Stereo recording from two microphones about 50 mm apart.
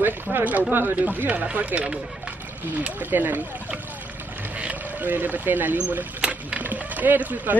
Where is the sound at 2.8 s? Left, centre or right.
Right.